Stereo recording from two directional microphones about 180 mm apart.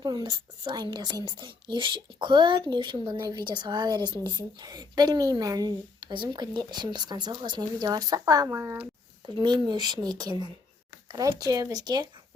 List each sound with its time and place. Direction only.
0.0 s a woman's voice: 25° right (ahead or behind)
9.2 s a woman's voice: 25° right (ahead or behind)